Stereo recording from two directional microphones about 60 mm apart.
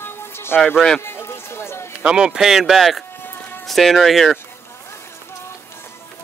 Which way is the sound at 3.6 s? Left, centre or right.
Centre.